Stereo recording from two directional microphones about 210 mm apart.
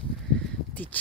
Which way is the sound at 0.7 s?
10° left (ahead or behind).